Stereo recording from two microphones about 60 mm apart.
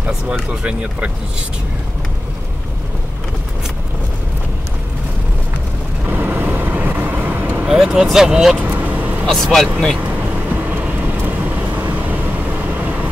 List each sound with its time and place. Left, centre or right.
0.0 s speech: centre
6.0 s vehicle: right
7.6 s speech: centre
8.5 s vehicle: right
9.2 s speech: centre
10.3 s vehicle: right